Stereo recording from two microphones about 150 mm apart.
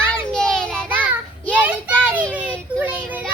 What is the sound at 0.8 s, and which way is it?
Child singing, 10° right (ahead or behind).